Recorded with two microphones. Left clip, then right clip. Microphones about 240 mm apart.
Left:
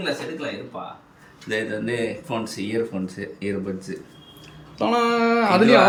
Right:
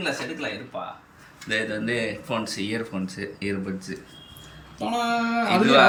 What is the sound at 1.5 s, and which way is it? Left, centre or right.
Speech, centre.